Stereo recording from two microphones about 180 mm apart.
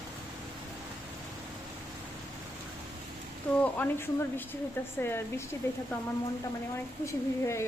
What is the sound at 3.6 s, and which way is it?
Speech, 10° left (ahead or behind).